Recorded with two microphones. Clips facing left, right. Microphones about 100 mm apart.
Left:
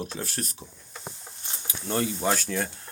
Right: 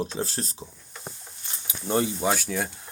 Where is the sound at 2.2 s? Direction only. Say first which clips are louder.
Right 1 dB; 5° right (ahead or behind).